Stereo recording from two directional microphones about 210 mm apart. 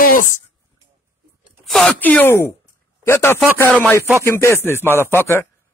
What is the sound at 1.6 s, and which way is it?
A man's voice, centre (ahead or behind).